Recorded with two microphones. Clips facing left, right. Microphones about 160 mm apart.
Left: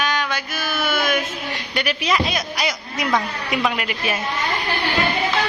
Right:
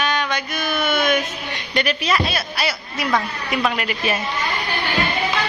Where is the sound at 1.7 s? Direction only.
10° left (ahead or behind).